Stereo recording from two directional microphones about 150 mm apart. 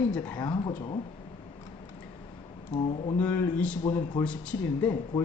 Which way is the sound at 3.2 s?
10° left (ahead or behind).